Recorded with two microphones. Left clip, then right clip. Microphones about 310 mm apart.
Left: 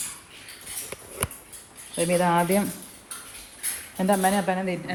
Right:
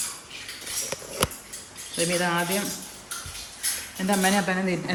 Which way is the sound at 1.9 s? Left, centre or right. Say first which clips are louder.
Left 3 dB; centre.